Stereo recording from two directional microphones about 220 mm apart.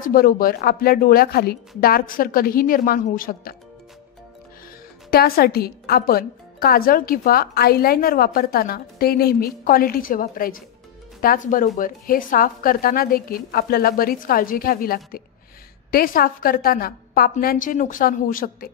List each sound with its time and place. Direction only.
0.0 s a woman's voice: 40° left (ahead or behind)
5.1 s a woman's voice: 45° left (ahead or behind)